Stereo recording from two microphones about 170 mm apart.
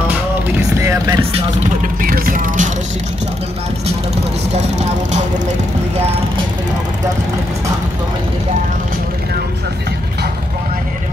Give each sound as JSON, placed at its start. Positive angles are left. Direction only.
{"t": 0.7, "sound": "vehicle", "side_deg": -20}
{"t": 2.0, "sound": "vehicle", "side_deg": -55}